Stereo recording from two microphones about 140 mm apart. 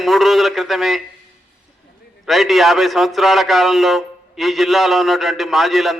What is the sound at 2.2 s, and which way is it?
A man's voice, centre (ahead or behind).